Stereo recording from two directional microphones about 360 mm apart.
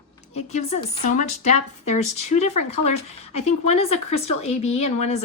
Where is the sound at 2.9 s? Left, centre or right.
Centre.